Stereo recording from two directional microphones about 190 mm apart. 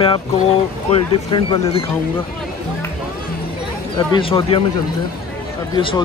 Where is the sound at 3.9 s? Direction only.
25° left (ahead or behind).